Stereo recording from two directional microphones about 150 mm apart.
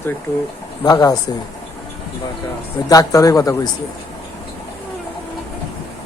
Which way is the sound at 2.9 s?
25° left (ahead or behind).